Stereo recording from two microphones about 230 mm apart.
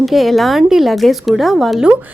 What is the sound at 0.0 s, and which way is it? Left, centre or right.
Speech, centre.